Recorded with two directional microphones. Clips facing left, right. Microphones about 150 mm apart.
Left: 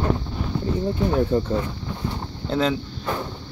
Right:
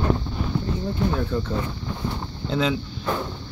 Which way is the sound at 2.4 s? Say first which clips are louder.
Left 1 dB; centre (ahead or behind).